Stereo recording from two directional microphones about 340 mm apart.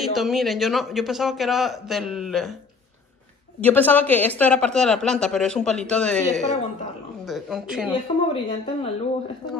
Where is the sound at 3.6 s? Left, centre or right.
Centre.